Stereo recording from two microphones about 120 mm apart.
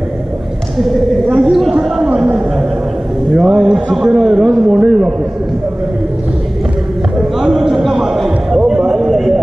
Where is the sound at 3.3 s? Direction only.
5° right (ahead or behind).